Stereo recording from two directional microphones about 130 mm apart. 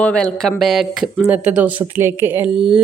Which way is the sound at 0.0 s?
10° left (ahead or behind).